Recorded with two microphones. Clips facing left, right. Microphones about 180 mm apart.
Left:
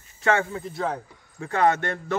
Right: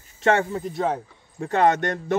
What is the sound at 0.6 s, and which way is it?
Speech, 20° right (ahead or behind).